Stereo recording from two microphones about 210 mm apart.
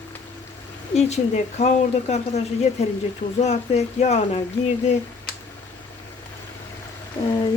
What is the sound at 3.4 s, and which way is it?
Speech, 30° left (ahead or behind).